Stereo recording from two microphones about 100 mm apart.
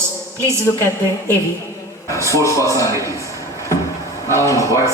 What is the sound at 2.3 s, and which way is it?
Speech, 30° left (ahead or behind).